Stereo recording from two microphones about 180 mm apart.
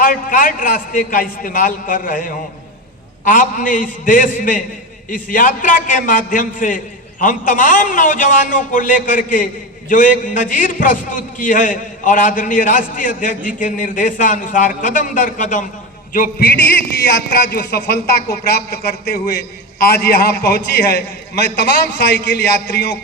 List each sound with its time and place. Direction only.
0.0 s a man's voice: 50° left (ahead or behind)
16.1 s a man's voice: 55° left (ahead or behind)